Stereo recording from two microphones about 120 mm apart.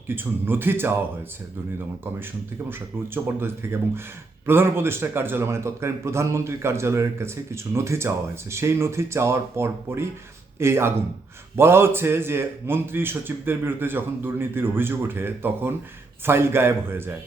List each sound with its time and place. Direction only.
0.2 s a man's voice: 15° right (ahead or behind)
3.2 s a man's voice: 20° right (ahead or behind)